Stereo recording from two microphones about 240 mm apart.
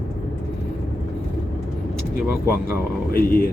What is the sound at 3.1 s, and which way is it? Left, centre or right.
Speech, left.